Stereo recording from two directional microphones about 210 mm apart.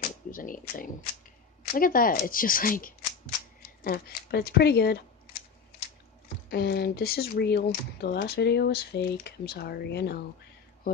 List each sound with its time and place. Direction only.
0.0 s a sound: 40° left (ahead or behind)
1.7 s speech: 40° left (ahead or behind)
6.5 s speech: 50° left (ahead or behind)